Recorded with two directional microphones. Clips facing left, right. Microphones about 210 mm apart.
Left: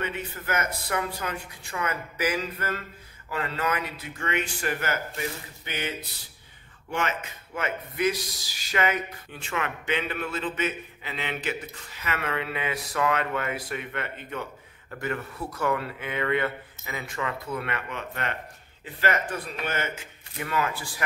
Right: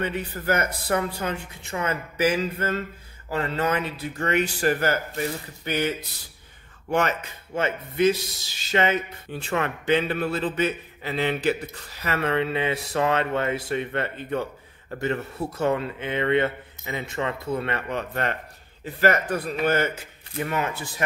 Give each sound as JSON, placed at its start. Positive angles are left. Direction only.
{"t": 0.0, "sound": "speech", "side_deg": -35}
{"t": 7.5, "sound": "speech", "side_deg": -30}
{"t": 20.4, "sound": "speech", "side_deg": -25}